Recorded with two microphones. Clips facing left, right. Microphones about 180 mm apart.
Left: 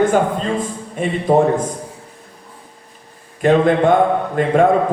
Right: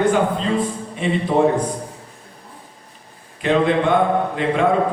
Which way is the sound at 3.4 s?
45° left (ahead or behind).